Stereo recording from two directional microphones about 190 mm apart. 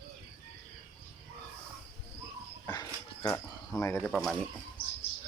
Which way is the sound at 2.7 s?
20° left (ahead or behind).